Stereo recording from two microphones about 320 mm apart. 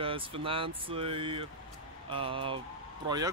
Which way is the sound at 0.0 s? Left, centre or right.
Centre.